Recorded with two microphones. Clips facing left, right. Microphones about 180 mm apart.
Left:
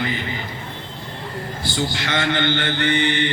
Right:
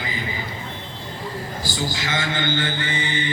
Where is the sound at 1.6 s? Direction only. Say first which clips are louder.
Left 4 dB; 65° left (ahead or behind).